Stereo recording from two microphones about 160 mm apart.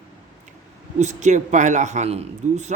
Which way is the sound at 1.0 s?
45° right (ahead or behind).